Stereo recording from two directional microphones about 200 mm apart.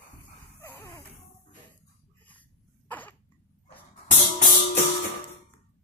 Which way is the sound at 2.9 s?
10° left (ahead or behind).